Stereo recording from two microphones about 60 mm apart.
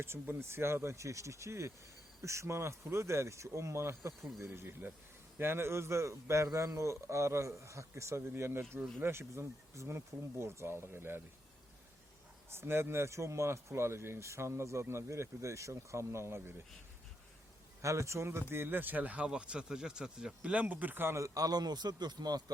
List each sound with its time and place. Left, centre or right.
0.0 s speech: right
4.4 s speech: right
6.5 s speech: right
8.4 s speech: right
12.5 s speech: right
17.8 s speech: right
21.2 s speech: right